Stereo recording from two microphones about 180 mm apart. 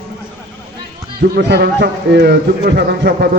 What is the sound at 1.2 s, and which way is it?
Speech, 70° right (ahead or behind).